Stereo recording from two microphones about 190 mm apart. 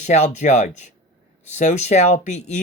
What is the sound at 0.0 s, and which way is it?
Speech, 35° left (ahead or behind).